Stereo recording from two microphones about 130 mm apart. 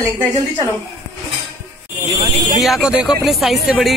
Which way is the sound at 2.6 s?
5° right (ahead or behind).